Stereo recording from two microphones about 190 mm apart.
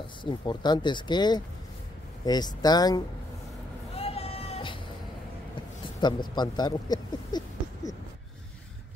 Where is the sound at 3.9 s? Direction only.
30° left (ahead or behind).